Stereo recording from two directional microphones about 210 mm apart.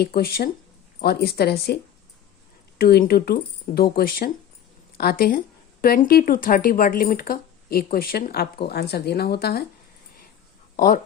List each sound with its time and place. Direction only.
0.0 s speech: 45° left (ahead or behind)
10.8 s speech: 45° left (ahead or behind)